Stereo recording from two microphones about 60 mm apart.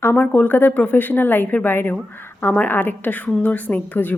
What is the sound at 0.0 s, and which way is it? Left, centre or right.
A woman's voice, left.